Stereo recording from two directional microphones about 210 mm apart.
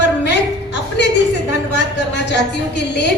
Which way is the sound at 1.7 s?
55° left (ahead or behind).